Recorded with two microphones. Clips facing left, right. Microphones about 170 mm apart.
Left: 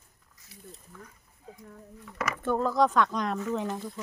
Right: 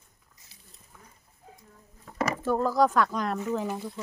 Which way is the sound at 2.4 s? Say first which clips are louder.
Right 1 dB; 5° right (ahead or behind).